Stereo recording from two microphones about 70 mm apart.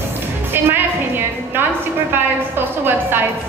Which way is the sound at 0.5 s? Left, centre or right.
Right.